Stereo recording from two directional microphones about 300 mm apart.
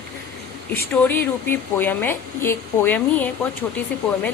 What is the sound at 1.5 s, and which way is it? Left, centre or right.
A woman's voice, centre.